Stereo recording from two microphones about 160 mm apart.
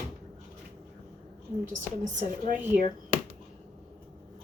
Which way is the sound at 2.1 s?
55° right (ahead or behind).